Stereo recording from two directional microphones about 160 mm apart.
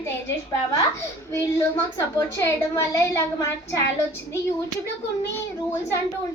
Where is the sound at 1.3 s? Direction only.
15° left (ahead or behind).